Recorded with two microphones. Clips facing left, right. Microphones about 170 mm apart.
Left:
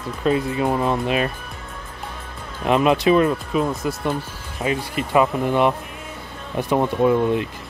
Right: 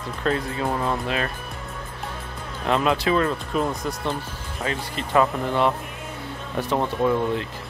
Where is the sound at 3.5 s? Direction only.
5° left (ahead or behind).